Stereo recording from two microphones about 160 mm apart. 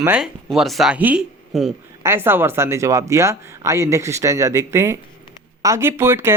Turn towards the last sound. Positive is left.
turn(degrees=-15)  # may be behind; listen again after turning